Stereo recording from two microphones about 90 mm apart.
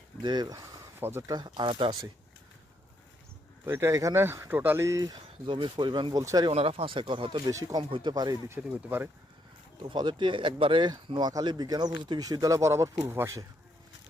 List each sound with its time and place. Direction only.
0.2 s speech: 55° right (ahead or behind)
0.9 s speech: 25° right (ahead or behind)
1.3 s speech: 55° right (ahead or behind); by 2.0 s 80° right
3.7 s speech: 30° right (ahead or behind)
5.5 s speech: 65° right (ahead or behind)
6.1 s speech: 40° right (ahead or behind)
6.7 s speech: 85° right
7.4 s speech: 45° right (ahead or behind)
7.9 s speech: 75° right (ahead or behind)
8.1 s speech: 45° right (ahead or behind)
8.6 s speech: 25° right (ahead or behind)
9.9 s speech: 60° right (ahead or behind)
11.3 s speech: 45° right (ahead or behind)